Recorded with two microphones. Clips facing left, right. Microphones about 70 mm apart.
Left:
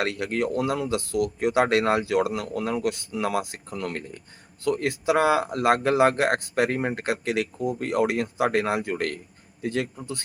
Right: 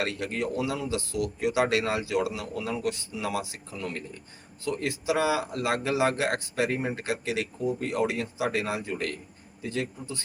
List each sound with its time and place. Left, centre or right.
0.0 s speech: left